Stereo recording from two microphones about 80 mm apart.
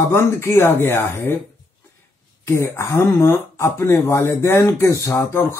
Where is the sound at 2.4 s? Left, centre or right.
Left.